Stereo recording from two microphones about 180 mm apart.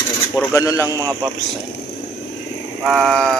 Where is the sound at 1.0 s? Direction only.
20° right (ahead or behind).